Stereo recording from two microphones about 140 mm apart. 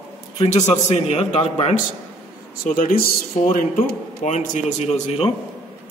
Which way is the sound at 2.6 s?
85° left.